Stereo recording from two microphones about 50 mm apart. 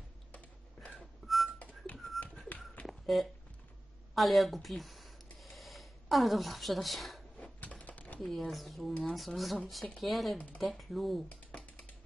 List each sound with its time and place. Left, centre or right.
0.9 s whistling: centre
2.2 s tap: centre
2.9 s a sound: centre
7.8 s computer keyboard: left
8.2 s speech: centre
11.2 s typing: left